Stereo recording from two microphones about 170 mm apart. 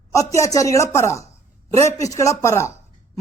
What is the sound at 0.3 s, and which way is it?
Speech, 20° left (ahead or behind).